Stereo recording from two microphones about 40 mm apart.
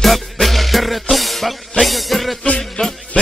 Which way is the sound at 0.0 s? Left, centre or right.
Centre.